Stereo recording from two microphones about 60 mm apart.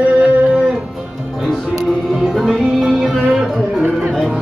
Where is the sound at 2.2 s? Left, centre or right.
Centre.